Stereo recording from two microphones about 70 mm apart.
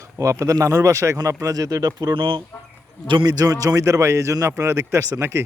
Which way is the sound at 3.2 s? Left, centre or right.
Right.